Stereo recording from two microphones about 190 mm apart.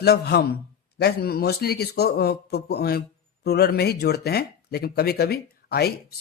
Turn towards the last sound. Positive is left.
turn(degrees=55)  # may be behind; listen again after turning